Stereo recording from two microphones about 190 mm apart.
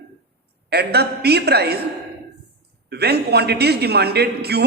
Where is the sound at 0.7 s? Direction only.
60° right (ahead or behind).